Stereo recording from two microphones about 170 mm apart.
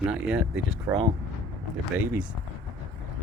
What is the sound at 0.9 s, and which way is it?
Speech, 15° right (ahead or behind).